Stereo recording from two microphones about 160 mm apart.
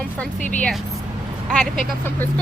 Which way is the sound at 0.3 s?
50° left (ahead or behind).